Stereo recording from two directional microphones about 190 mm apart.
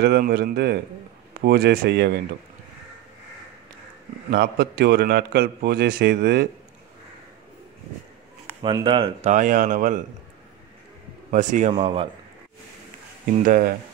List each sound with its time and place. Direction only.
0.0 s a man's voice: 55° right (ahead or behind)
4.3 s a man's voice: 55° right (ahead or behind)
8.6 s speech: 25° right (ahead or behind)
9.3 s speech: 40° right (ahead or behind)
11.2 s a man's voice: 40° right (ahead or behind)
11.8 s speech: 30° right (ahead or behind)
13.5 s speech: 45° right (ahead or behind)